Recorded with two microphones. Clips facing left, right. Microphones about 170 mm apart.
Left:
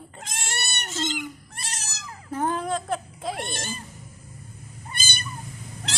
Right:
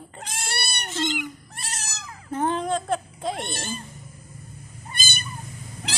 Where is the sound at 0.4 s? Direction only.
30° right (ahead or behind).